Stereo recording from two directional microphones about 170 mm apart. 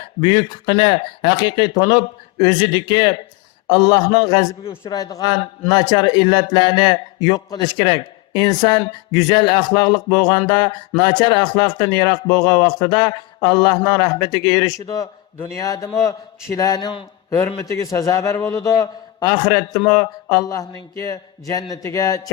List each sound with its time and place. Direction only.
0.2 s a man's voice: 25° left (ahead or behind)